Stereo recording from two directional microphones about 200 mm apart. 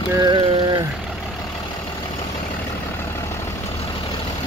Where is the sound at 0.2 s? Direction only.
25° right (ahead or behind).